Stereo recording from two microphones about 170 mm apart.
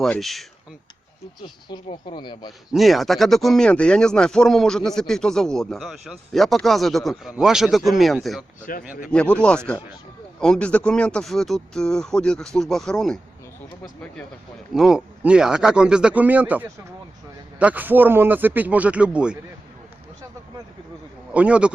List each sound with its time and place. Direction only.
0.0 s speech: centre (ahead or behind)
1.4 s speech: 25° left (ahead or behind)
2.7 s speech: centre (ahead or behind)
8.7 s speech: 55° left (ahead or behind)
9.1 s speech: 5° left (ahead or behind)
14.7 s speech: centre (ahead or behind)
21.3 s speech: 5° right (ahead or behind)